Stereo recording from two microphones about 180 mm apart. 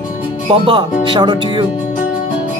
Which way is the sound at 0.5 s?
30° right (ahead or behind).